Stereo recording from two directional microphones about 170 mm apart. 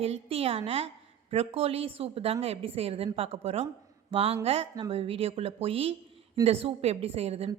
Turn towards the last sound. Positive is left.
turn(degrees=-35)  # may be behind; listen again after turning